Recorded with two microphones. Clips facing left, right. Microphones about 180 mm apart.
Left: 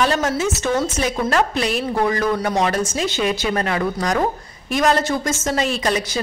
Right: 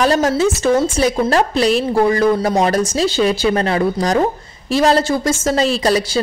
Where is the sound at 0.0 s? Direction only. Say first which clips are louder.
Right 5 dB; 35° right (ahead or behind).